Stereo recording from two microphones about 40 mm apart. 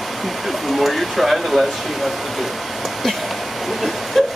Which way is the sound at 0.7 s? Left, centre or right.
Centre.